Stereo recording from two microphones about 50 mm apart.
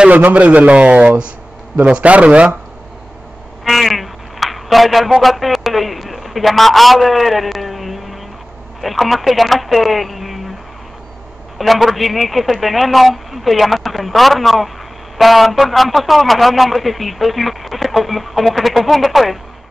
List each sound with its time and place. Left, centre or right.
0.1 s a man's voice: right
3.6 s a man's voice: centre
11.5 s a man's voice: centre